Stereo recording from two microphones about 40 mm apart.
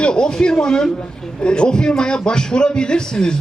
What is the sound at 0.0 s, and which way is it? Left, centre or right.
A man's voice, left.